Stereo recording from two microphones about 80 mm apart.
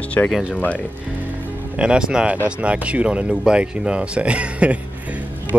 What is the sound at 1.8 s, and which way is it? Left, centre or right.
Speech, centre.